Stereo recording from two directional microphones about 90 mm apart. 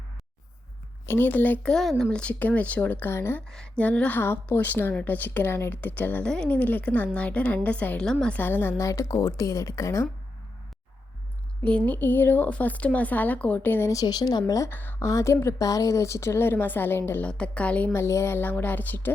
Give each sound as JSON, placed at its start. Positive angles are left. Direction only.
{"t": 1.0, "sound": "a woman's voice", "side_deg": 25}
{"t": 1.7, "sound": "a woman's voice", "side_deg": 5}
{"t": 3.5, "sound": "a woman's voice", "side_deg": 10}
{"t": 6.2, "sound": "a woman's voice", "side_deg": 10}
{"t": 8.4, "sound": "a woman's voice", "side_deg": 20}
{"t": 8.8, "sound": "a woman's voice", "side_deg": 35}
{"t": 11.6, "sound": "a woman's voice", "side_deg": 15}
{"t": 13.9, "sound": "speech", "side_deg": 45}
{"t": 14.7, "sound": "a woman's voice", "side_deg": 25}
{"t": 17.2, "sound": "a woman's voice", "side_deg": 10}
{"t": 17.9, "sound": "a woman's voice", "side_deg": 30}